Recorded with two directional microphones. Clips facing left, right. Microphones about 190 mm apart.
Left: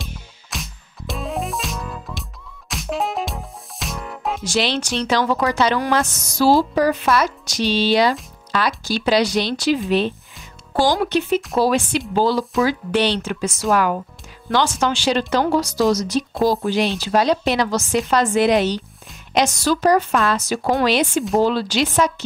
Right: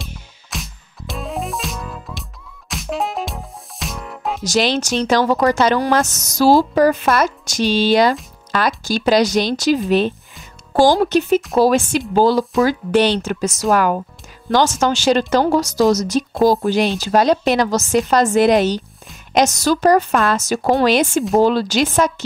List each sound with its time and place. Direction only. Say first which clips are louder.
0.0 s music: even; centre (ahead or behind)
4.5 s speech: right 4 dB; 45° right (ahead or behind)